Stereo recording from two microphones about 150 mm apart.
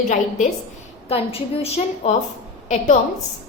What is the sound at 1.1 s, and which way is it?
A woman's voice, 40° left (ahead or behind).